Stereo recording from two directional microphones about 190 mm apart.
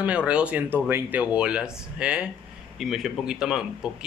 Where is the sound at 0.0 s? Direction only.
5° right (ahead or behind).